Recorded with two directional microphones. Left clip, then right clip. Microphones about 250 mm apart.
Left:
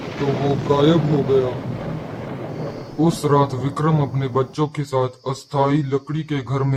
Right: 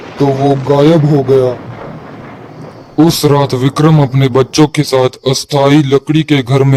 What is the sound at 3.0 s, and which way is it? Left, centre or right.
A man's voice, right.